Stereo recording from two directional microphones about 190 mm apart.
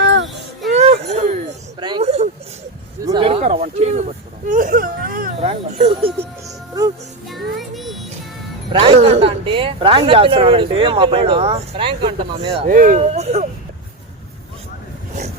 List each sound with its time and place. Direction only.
0.0 s a sound: 70° right (ahead or behind)
0.7 s a sound: 35° right (ahead or behind)
4.4 s whimper: 45° right (ahead or behind)
5.4 s speech: 30° right (ahead or behind)
7.3 s music: centre (ahead or behind)
8.7 s speech: 30° right (ahead or behind)
12.5 s speech: 45° right (ahead or behind)